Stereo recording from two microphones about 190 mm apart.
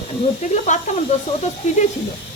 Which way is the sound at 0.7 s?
40° left (ahead or behind).